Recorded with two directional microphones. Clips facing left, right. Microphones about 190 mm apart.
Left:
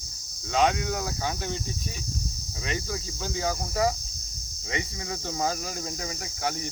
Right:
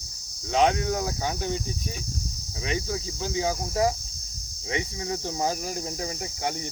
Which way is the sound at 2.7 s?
20° right (ahead or behind).